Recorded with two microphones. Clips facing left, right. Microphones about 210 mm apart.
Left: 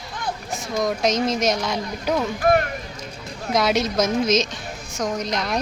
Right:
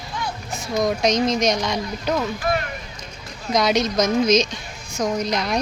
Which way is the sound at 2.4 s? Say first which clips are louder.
Left 5 dB; 55° left (ahead or behind).